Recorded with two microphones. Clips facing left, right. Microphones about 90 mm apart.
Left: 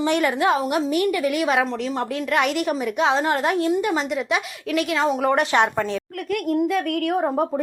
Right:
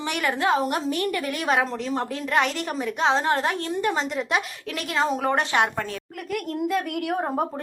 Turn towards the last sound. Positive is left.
turn(degrees=0)  # may be behind; listen again after turning